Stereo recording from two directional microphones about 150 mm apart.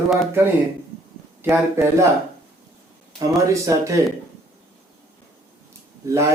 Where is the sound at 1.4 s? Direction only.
15° right (ahead or behind).